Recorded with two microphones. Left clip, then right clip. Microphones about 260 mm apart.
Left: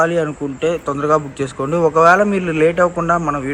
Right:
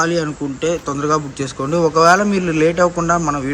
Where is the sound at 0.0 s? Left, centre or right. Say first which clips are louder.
Left 2 dB; centre.